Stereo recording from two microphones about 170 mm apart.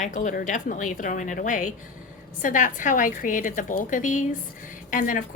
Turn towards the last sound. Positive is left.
turn(degrees=50)  # may be behind; listen again after turning